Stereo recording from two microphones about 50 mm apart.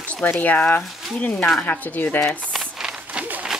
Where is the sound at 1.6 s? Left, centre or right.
Left.